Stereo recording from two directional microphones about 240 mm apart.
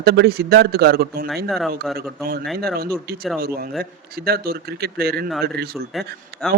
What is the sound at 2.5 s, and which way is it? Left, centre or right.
Speech, right.